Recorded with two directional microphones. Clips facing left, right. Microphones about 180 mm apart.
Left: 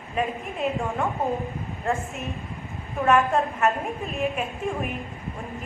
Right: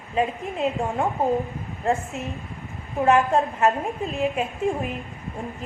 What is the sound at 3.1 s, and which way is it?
A woman's voice, 30° right (ahead or behind).